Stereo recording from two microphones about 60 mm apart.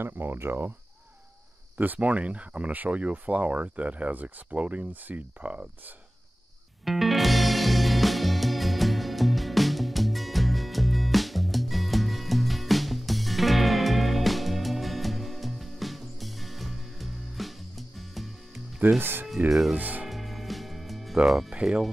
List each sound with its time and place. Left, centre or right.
0.0 s speech: right
1.8 s speech: right
6.8 s music: centre
18.9 s speech: right
19.5 s speech: centre
19.8 s speech: right
20.1 s music: centre
21.3 s speech: centre